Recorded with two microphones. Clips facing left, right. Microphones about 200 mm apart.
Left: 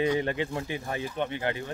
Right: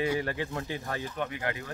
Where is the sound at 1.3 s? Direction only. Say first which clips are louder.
Left 4 dB; 30° left (ahead or behind).